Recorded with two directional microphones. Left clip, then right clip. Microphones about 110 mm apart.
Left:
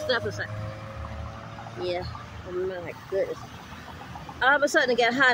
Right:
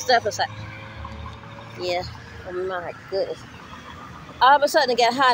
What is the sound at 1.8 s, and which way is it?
Speech, 15° left (ahead or behind).